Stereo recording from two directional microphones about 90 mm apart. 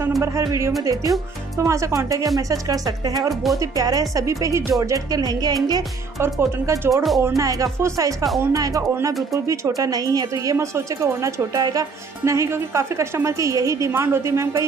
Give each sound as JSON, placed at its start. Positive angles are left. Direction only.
{"t": 0.4, "sound": "speech", "side_deg": -35}
{"t": 6.9, "sound": "speech", "side_deg": 0}
{"t": 7.3, "sound": "speech", "side_deg": -40}
{"t": 12.3, "sound": "speech", "side_deg": -35}